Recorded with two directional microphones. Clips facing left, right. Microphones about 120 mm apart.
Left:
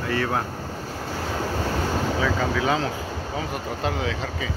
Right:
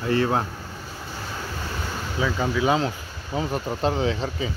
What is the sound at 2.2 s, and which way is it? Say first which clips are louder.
Speech: right 4 dB; 20° right (ahead or behind).